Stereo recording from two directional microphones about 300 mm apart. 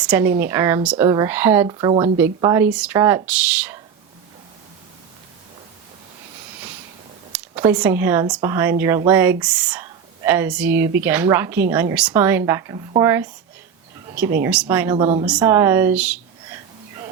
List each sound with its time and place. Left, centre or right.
0.0 s speech: centre
7.3 s speech: centre
14.9 s speech: centre